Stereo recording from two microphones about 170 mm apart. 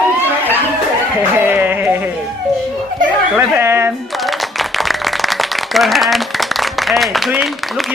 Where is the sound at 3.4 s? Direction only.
15° right (ahead or behind).